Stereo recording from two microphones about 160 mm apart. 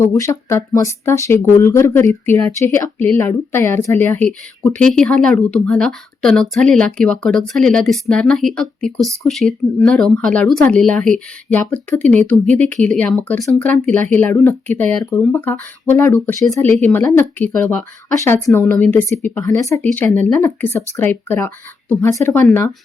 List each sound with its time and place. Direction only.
0.0 s speech: 15° left (ahead or behind)